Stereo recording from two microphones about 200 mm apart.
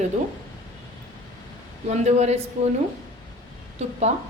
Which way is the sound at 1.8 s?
35° right (ahead or behind).